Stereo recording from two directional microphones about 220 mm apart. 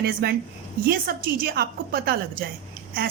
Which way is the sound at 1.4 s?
40° right (ahead or behind).